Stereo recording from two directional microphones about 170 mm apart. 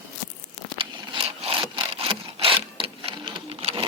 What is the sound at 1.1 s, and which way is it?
Wood, 30° right (ahead or behind).